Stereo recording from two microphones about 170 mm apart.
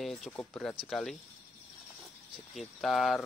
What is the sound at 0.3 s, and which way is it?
Speech, 15° left (ahead or behind).